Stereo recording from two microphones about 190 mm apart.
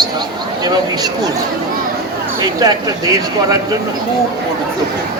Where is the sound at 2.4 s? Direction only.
20° right (ahead or behind).